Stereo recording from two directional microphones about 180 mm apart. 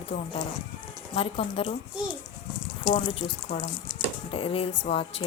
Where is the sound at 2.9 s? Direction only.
30° left (ahead or behind).